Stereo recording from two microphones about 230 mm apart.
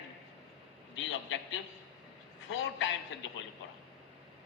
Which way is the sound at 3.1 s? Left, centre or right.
Left.